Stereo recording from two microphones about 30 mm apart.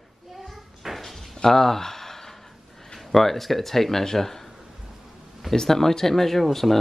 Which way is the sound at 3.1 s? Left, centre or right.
Centre.